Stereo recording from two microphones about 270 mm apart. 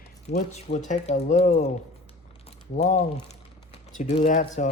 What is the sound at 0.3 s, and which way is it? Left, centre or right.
Speech, left.